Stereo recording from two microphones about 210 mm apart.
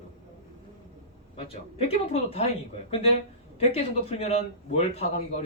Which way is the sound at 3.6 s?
30° left (ahead or behind).